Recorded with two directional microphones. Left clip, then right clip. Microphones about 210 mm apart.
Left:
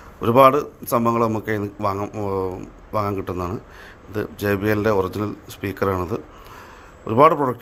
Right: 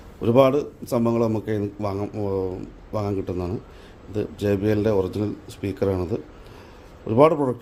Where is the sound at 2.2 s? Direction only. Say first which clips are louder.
Left 2 dB; 20° left (ahead or behind).